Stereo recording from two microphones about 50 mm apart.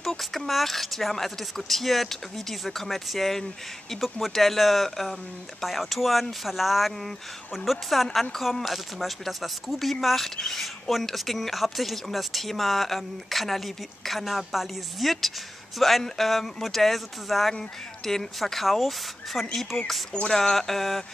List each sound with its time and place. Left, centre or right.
0.0 s a woman's voice: centre
20.1 s speech: centre
20.3 s a woman's voice: centre